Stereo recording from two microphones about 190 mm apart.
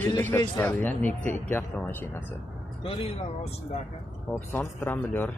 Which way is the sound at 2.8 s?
30° left (ahead or behind).